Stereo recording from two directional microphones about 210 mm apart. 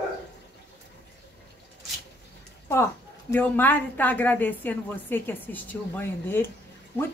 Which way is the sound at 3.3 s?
10° left (ahead or behind).